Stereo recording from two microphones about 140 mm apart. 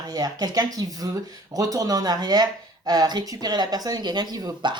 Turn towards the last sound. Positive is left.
turn(degrees=-30)  # may be behind; listen again after turning